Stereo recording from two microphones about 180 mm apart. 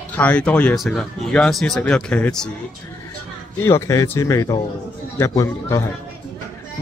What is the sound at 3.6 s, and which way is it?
A man's voice, 15° left (ahead or behind).